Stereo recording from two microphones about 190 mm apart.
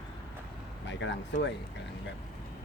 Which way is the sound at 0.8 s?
70° left (ahead or behind).